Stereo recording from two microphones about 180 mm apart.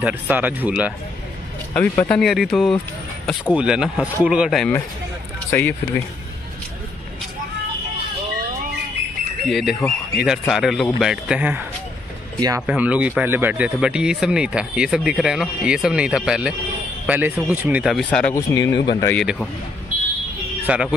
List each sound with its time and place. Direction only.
0.0 s speech: 10° right (ahead or behind)
1.7 s speech: 10° left (ahead or behind)
5.5 s speech: 15° left (ahead or behind)
9.5 s speech: centre (ahead or behind)
12.4 s speech: 20° right (ahead or behind)
12.6 s speech: 10° right (ahead or behind)
18.3 s speech: 20° left (ahead or behind)
19.1 s speech: centre (ahead or behind)
20.6 s speech: 5° right (ahead or behind)